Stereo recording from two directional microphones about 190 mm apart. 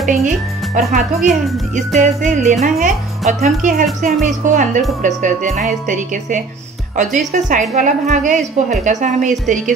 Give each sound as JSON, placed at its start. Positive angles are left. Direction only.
{"t": 0.1, "sound": "a woman's voice", "side_deg": -40}